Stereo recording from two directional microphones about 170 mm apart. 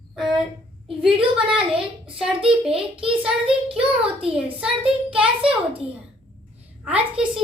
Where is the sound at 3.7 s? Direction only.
35° right (ahead or behind).